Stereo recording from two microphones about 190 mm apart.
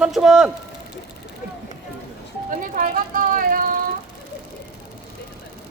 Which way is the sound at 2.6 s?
45° right (ahead or behind).